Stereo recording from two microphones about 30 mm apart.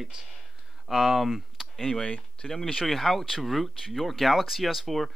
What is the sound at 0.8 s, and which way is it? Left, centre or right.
Speech, centre.